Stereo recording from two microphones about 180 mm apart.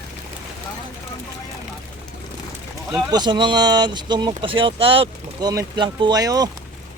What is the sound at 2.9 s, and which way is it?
Speech, 25° right (ahead or behind).